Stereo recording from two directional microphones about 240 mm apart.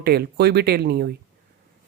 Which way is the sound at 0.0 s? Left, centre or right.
Right.